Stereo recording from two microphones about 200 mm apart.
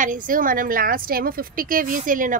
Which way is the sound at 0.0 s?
40° right (ahead or behind).